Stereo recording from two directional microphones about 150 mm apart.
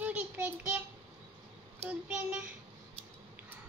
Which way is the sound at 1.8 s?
10° right (ahead or behind).